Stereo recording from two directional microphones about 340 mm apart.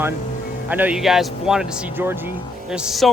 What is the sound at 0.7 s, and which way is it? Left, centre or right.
A man's voice, centre.